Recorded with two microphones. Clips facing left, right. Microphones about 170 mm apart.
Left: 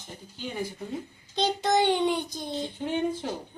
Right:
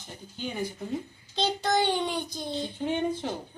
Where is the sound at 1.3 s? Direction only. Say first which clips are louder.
Left 2 dB; 20° left (ahead or behind).